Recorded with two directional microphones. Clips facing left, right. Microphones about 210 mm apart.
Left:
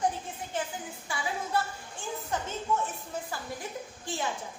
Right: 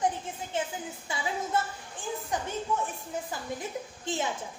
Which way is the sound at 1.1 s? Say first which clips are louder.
Even; 20° right (ahead or behind).